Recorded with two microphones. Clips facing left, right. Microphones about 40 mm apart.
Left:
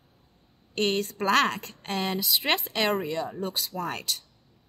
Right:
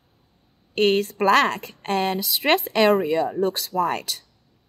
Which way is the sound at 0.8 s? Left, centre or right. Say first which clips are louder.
Right 7 dB; centre.